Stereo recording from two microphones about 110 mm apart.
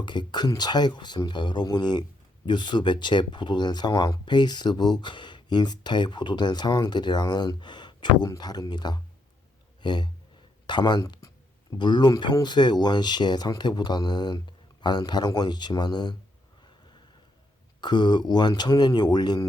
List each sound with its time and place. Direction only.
0.0 s speech: 45° left (ahead or behind)
9.8 s a sound: 40° left (ahead or behind)
10.7 s speech: 40° left (ahead or behind)
17.7 s speech: 40° left (ahead or behind)